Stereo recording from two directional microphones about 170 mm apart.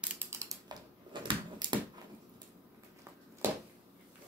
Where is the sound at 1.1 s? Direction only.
25° right (ahead or behind).